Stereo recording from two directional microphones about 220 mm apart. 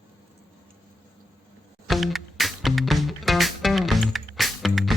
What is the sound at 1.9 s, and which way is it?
Music, centre (ahead or behind).